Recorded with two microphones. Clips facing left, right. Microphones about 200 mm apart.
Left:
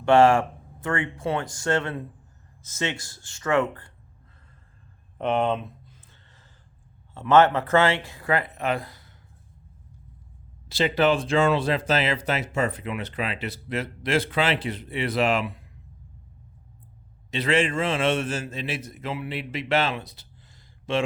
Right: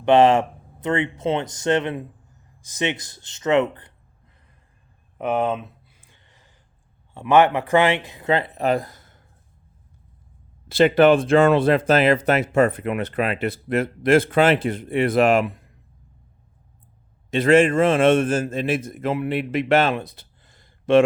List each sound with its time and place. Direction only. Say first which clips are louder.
0.0 s speech: right 2 dB; 20° right (ahead or behind)
5.1 s a sound: right 1 dB; 5° right (ahead or behind)
7.1 s speech: right 2 dB; 15° right (ahead or behind); by 9.1 s 45° right (ahead or behind)
10.7 s speech: right 7 dB; 55° right (ahead or behind)
17.3 s speech: right 8 dB; 50° right (ahead or behind)